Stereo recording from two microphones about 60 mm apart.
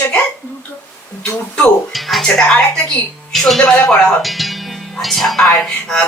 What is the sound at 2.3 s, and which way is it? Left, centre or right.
A woman's voice, centre.